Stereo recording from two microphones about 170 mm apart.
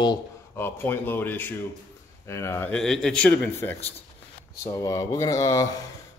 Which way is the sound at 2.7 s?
5° left (ahead or behind).